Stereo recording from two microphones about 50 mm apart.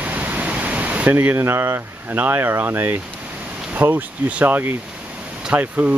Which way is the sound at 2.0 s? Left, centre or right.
Right.